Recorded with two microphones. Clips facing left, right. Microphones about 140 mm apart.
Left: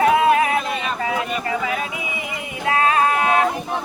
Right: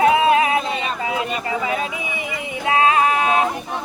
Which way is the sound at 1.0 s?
20° right (ahead or behind).